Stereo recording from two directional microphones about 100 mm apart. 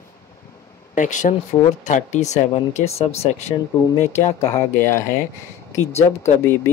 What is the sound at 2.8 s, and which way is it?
Speech, 90° left.